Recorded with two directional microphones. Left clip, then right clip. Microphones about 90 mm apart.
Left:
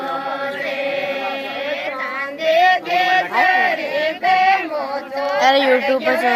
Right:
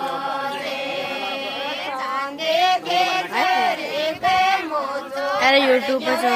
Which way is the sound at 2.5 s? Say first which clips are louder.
Left 5 dB; 40° right (ahead or behind).